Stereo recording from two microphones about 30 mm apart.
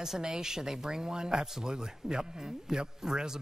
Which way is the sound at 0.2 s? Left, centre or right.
Right.